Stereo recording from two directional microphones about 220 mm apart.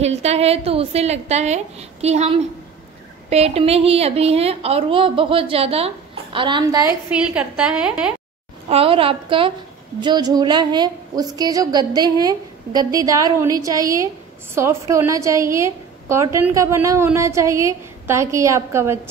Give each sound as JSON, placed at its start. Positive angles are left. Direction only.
{"t": 0.0, "sound": "a woman's voice", "side_deg": -30}
{"t": 7.2, "sound": "a woman's voice", "side_deg": -5}
{"t": 8.6, "sound": "a woman's voice", "side_deg": -25}